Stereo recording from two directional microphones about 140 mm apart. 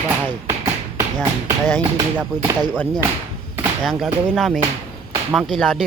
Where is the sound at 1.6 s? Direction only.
15° left (ahead or behind).